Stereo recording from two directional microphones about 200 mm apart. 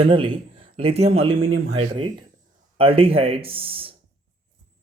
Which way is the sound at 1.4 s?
90° right.